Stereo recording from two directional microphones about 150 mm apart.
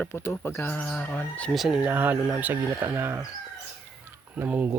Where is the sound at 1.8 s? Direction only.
10° right (ahead or behind).